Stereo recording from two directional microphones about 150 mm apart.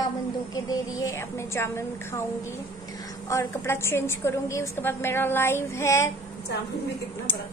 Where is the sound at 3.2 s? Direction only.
20° left (ahead or behind).